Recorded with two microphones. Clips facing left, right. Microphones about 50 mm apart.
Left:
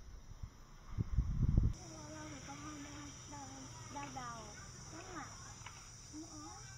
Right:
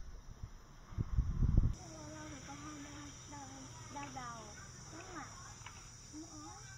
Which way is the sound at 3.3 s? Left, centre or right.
Right.